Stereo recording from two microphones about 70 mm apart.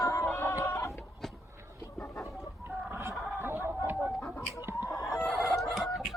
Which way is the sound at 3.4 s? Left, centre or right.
Right.